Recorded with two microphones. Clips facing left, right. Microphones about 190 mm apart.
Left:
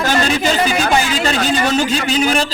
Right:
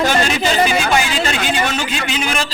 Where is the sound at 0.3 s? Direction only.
15° right (ahead or behind).